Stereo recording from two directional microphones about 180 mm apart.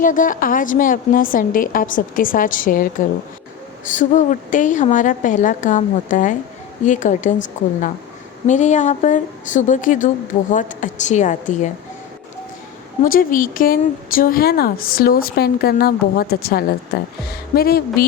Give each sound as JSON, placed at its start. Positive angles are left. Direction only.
{"t": 0.0, "sound": "a woman's voice", "side_deg": 50}
{"t": 3.9, "sound": "a woman's voice", "side_deg": 45}
{"t": 8.4, "sound": "a woman's voice", "side_deg": 40}
{"t": 13.0, "sound": "speech", "side_deg": 50}